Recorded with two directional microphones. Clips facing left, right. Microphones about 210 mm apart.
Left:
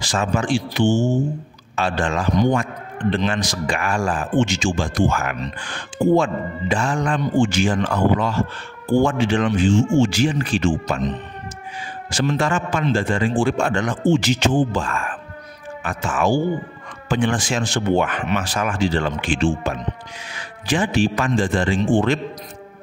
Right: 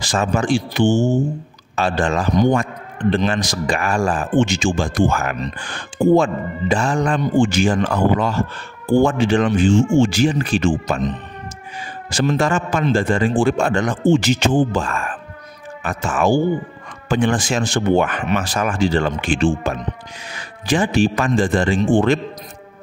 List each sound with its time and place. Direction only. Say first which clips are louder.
0.0 s speech: right 2 dB; 40° right (ahead or behind)
1.8 s speech: right 3 dB; 40° right (ahead or behind)
4.4 s speech: right 2 dB; 55° right (ahead or behind)
4.8 s speech: right 2 dB; 45° right (ahead or behind)
12.1 s speech: right 3 dB; 40° right (ahead or behind)